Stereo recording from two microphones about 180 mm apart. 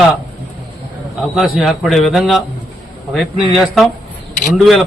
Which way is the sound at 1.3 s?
Centre (ahead or behind).